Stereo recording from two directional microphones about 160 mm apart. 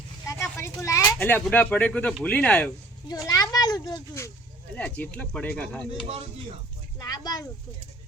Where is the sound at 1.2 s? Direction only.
10° left (ahead or behind).